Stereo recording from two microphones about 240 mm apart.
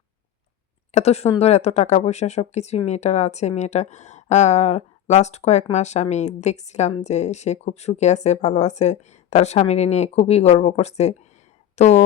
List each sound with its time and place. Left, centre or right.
0.9 s speech: left